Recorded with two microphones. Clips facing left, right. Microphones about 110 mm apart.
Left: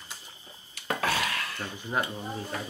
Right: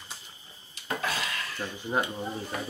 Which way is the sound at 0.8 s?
70° left (ahead or behind).